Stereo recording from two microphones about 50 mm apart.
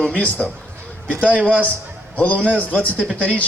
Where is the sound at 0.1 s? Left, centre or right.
Left.